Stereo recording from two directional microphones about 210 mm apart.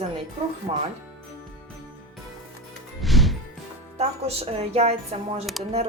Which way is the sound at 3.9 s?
30° right (ahead or behind).